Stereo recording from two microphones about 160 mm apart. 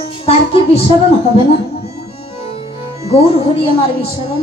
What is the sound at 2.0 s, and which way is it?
Tabla, 40° left (ahead or behind).